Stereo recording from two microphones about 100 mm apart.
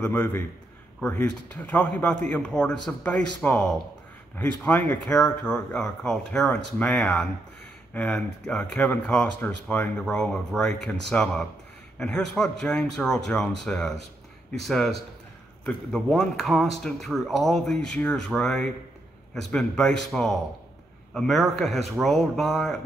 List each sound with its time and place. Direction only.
0.0 s a man's voice: 20° left (ahead or behind); by 22.8 s centre (ahead or behind)